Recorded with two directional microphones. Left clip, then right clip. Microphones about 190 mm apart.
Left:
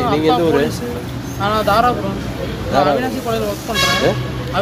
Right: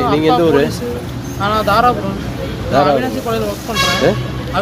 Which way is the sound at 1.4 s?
5° right (ahead or behind).